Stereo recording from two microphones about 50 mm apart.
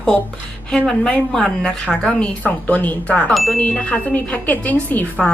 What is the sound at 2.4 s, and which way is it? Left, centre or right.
Speech, left.